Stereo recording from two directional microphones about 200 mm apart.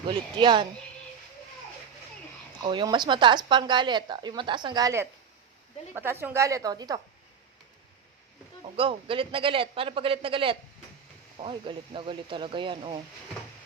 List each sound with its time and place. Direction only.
0.1 s speech: 25° right (ahead or behind)
2.6 s a woman's voice: 20° right (ahead or behind)
8.7 s speech: 25° right (ahead or behind)